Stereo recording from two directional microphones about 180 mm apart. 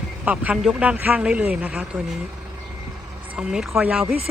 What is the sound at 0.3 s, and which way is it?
A man's voice, 5° right (ahead or behind).